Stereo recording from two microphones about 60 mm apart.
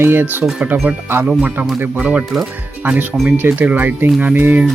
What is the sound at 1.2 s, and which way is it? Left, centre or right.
Speech, right.